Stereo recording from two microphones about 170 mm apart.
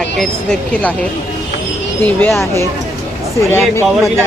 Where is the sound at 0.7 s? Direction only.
10° left (ahead or behind).